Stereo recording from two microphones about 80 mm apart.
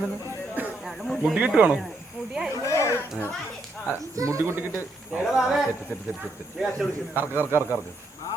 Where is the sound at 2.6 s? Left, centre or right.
Left.